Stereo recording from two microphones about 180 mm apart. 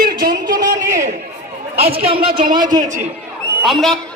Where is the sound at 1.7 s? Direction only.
35° right (ahead or behind).